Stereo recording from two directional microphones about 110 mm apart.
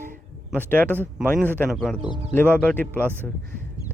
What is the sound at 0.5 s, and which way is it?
Speech, 15° left (ahead or behind).